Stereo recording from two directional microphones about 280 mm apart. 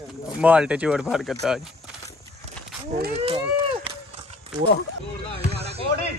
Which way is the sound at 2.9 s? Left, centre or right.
Right.